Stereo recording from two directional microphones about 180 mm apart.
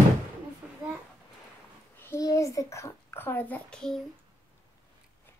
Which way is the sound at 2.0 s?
15° left (ahead or behind).